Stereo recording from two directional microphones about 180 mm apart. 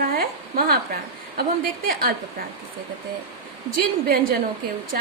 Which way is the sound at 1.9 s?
55° right (ahead or behind).